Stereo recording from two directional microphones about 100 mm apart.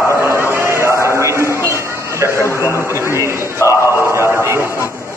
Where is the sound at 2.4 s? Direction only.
30° left (ahead or behind).